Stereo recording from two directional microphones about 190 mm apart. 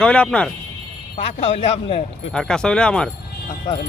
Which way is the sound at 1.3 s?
30° left (ahead or behind).